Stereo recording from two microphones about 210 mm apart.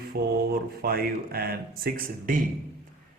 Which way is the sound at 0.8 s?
45° right (ahead or behind).